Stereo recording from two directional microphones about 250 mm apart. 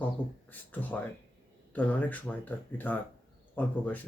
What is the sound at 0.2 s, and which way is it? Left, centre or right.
Speech, centre.